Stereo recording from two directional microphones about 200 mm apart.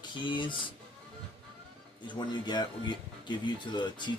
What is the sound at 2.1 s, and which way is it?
Speech, 20° left (ahead or behind).